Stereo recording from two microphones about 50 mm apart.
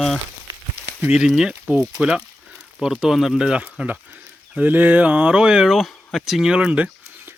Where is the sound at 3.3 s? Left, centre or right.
Centre.